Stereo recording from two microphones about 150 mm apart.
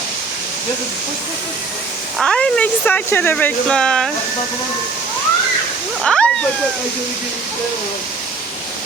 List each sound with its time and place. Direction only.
2.1 s speech: 5° left (ahead or behind)
6.0 s waterfall: 5° left (ahead or behind)